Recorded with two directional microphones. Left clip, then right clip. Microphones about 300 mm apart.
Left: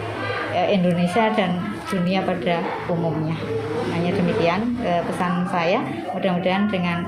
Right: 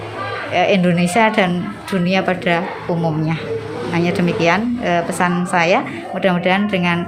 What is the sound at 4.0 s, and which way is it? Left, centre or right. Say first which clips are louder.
A woman's voice: right 6 dB; right.